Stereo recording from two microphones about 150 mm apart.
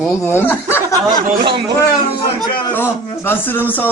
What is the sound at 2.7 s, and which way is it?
A man's voice, 15° left (ahead or behind).